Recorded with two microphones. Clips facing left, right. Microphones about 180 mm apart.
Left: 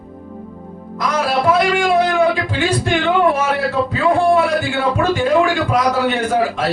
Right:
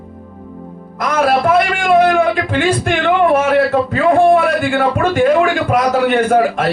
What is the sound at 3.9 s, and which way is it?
A man's voice, 55° right (ahead or behind).